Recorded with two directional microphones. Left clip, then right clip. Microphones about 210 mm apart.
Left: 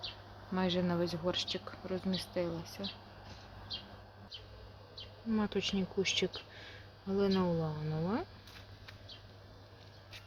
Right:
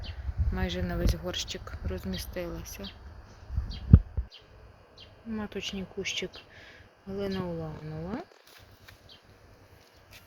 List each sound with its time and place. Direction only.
0.5 s speech: 10° right (ahead or behind); by 2.8 s 25° right (ahead or behind)
5.3 s speech: 10° left (ahead or behind)